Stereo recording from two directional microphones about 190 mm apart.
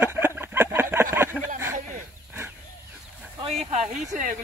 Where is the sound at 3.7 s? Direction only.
35° right (ahead or behind).